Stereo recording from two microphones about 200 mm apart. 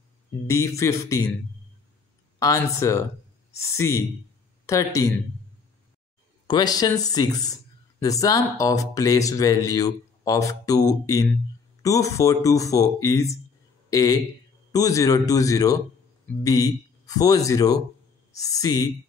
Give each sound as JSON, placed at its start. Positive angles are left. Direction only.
{"t": 0.5, "sound": "speech", "side_deg": 15}
{"t": 2.3, "sound": "speech", "side_deg": 15}
{"t": 6.4, "sound": "speech", "side_deg": 20}